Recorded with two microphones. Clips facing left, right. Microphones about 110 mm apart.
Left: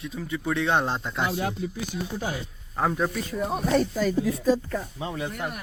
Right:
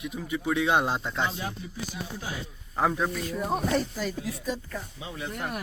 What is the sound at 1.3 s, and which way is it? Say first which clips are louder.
Speech: left 7 dB; 60° left (ahead or behind).